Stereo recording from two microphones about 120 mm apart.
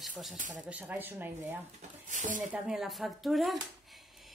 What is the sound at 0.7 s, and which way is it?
Speech, 15° right (ahead or behind).